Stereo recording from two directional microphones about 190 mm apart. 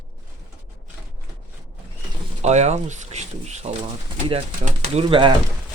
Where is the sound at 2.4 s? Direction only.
35° right (ahead or behind).